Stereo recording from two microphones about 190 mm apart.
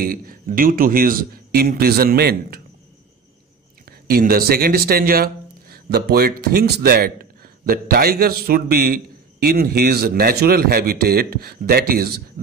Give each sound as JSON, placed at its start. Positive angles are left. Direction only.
{"t": 0.0, "sound": "speech", "side_deg": -50}
{"t": 4.1, "sound": "speech", "side_deg": -50}